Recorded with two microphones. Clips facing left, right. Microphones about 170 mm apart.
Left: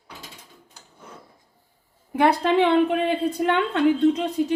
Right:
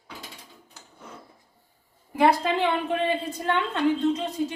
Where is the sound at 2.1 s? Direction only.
60° left (ahead or behind).